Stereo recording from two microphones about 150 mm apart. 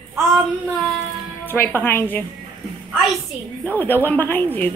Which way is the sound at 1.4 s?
15° left (ahead or behind).